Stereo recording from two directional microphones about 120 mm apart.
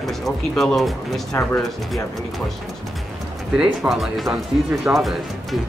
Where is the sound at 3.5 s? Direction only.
10° right (ahead or behind).